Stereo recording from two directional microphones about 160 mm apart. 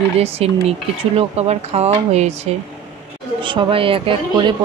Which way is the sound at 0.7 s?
40° right (ahead or behind).